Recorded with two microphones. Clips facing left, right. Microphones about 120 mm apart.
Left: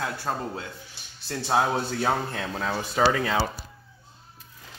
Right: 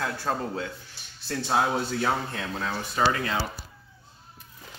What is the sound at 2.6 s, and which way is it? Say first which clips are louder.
Speech: left 3 dB; 65° left (ahead or behind).